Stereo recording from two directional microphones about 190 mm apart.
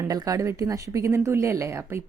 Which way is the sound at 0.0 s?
20° right (ahead or behind).